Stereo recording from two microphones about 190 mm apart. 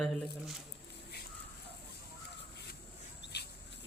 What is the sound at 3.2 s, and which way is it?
Dog, 60° left (ahead or behind).